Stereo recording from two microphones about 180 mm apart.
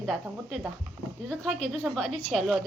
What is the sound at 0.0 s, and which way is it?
Speech, centre (ahead or behind).